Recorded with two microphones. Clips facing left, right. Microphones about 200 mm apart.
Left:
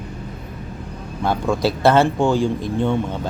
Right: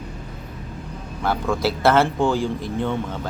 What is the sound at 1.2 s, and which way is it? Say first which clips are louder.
Speech: left 3 dB; 15° left (ahead or behind).